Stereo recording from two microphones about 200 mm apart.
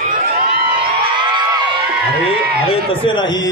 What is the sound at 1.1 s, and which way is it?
Crowd, 20° right (ahead or behind).